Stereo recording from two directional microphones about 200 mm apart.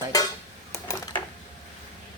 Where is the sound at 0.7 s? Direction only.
20° left (ahead or behind).